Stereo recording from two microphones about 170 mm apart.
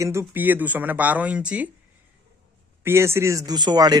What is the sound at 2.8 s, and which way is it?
Speech, 15° right (ahead or behind).